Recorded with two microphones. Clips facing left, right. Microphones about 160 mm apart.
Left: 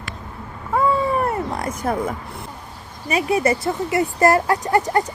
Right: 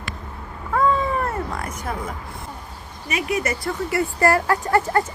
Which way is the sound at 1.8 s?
45° left (ahead or behind).